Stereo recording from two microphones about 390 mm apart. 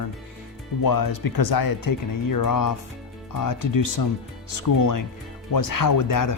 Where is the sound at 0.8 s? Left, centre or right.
Left.